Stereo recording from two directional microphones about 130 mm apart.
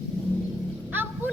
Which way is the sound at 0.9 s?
15° right (ahead or behind).